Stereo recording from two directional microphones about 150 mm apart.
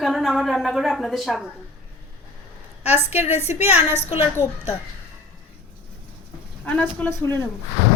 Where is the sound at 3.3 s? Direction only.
15° right (ahead or behind).